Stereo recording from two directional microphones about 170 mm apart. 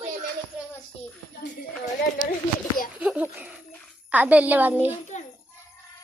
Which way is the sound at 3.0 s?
10° right (ahead or behind).